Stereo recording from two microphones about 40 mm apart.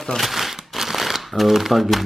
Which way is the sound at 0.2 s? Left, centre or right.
Centre.